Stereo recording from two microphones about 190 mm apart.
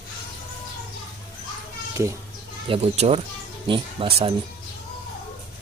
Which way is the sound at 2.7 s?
30° right (ahead or behind).